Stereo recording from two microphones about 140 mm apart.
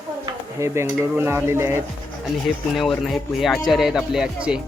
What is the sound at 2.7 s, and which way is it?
Speech, centre (ahead or behind).